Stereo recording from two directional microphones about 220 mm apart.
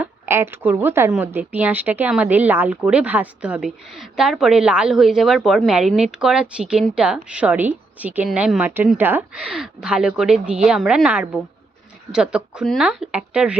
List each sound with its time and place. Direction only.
0.0 s speech: 10° right (ahead or behind)